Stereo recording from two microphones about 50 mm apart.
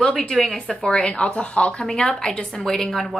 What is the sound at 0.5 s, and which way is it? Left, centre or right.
A woman's voice, centre.